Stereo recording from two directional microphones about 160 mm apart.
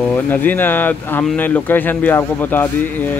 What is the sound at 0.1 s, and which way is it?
Speech, 10° left (ahead or behind).